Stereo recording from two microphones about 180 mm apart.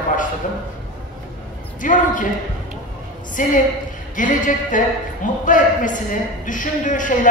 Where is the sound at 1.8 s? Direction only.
45° left (ahead or behind).